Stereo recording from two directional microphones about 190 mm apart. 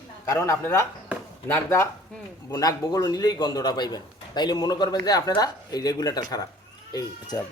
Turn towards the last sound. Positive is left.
turn(degrees=20)  # may be behind; listen again after turning